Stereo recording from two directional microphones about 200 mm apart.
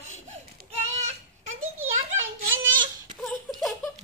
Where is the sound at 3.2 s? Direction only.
Centre (ahead or behind).